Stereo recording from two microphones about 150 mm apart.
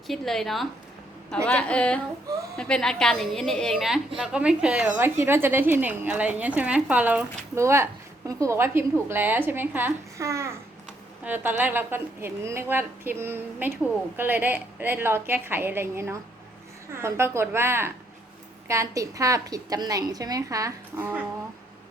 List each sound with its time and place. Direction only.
0.1 s a woman's voice: centre (ahead or behind)
4.9 s a woman's voice: 15° right (ahead or behind)